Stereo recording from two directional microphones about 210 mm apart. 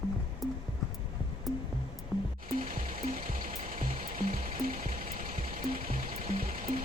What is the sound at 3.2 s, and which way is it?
Music, 40° right (ahead or behind).